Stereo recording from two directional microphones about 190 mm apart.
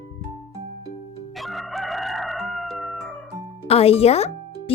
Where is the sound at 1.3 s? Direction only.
Centre (ahead or behind).